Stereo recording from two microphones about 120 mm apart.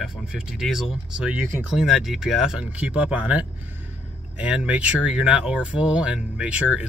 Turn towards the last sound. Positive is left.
turn(degrees=-10)  # may be behind; listen again after turning